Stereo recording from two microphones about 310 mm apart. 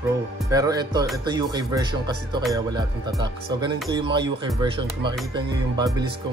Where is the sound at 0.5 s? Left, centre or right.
Centre.